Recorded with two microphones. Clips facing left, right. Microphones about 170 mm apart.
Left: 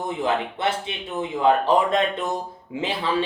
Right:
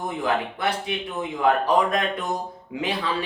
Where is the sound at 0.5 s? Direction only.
25° left (ahead or behind).